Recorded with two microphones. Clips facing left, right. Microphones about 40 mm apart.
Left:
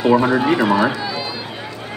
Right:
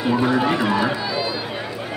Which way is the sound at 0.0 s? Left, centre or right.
Centre.